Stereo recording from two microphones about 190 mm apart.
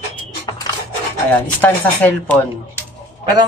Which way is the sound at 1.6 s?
10° left (ahead or behind).